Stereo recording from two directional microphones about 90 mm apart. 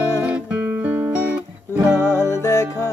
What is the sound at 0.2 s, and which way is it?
Music, 15° right (ahead or behind).